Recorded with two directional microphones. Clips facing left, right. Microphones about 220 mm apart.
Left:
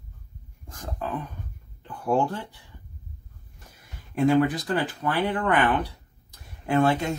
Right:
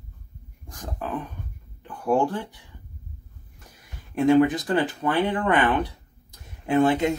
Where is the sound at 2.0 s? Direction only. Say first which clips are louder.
Right 2 dB; 15° right (ahead or behind).